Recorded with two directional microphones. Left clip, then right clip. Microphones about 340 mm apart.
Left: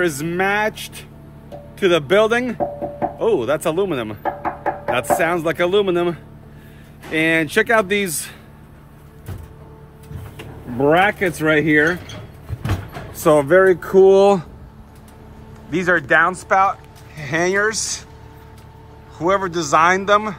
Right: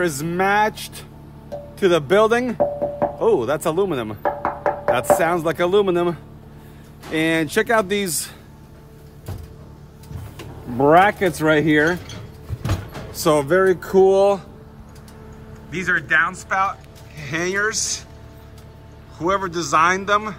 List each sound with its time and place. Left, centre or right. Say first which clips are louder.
0.0 s speech: left 1 dB; centre
1.8 s speech: left 1 dB; centre
10.8 s speech: right 1 dB; centre
13.1 s speech: left 4 dB; centre
14.0 s speech: left 4 dB; left
15.7 s speech: left 3 dB; centre
16.4 s speech: left 5 dB; centre
19.1 s a man's voice: left 3 dB; centre